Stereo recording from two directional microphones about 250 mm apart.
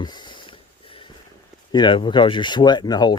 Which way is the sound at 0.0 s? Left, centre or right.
Centre.